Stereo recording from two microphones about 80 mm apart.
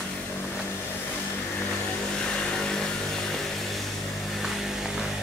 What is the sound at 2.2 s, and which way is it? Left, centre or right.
Vehicle, centre.